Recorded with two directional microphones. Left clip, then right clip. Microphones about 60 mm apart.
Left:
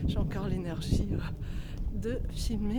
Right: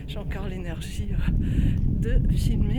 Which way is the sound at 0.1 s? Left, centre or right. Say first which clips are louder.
Right 4 dB; left.